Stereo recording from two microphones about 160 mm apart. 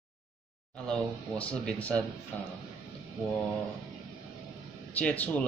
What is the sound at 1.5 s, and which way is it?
Speech, 10° left (ahead or behind).